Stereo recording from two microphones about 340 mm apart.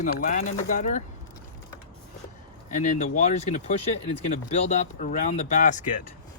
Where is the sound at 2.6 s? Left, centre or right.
Left.